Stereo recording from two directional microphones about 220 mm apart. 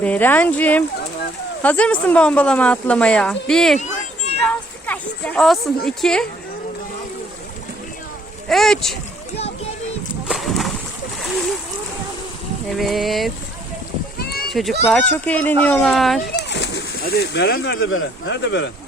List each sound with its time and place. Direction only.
0.0 s a woman's voice: 10° left (ahead or behind)
8.4 s speech: centre (ahead or behind)
10.2 s a sound: centre (ahead or behind)
12.7 s speech: centre (ahead or behind)
14.2 s a sound: 45° left (ahead or behind)
14.5 s speech: centre (ahead or behind)
16.3 s speech: 50° left (ahead or behind)